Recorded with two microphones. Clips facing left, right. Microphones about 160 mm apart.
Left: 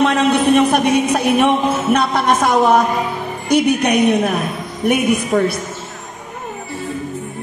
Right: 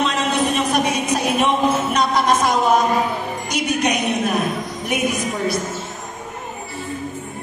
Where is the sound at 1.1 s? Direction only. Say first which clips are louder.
Left 4 dB; 60° left (ahead or behind).